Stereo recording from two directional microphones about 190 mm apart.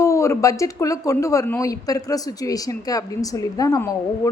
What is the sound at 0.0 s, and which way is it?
A woman's voice, 15° left (ahead or behind).